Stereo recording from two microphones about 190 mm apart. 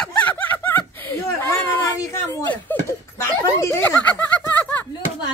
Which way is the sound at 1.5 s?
15° left (ahead or behind).